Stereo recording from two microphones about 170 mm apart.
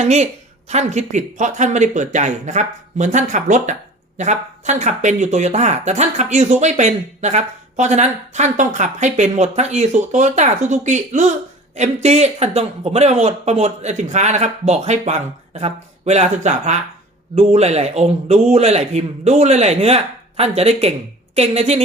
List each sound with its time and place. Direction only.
0.0 s speech: 40° right (ahead or behind)